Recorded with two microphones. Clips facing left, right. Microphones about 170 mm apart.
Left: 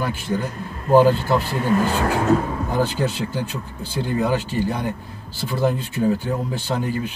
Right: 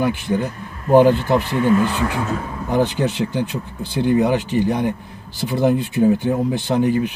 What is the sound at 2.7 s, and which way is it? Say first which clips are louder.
Speech: right 5 dB; 15° right (ahead or behind).